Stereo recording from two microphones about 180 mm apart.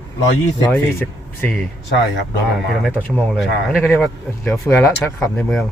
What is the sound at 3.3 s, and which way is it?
Speech, centre (ahead or behind).